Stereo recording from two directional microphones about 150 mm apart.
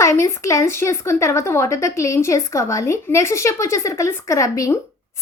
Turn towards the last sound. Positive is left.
turn(degrees=20)  # may be behind; listen again after turning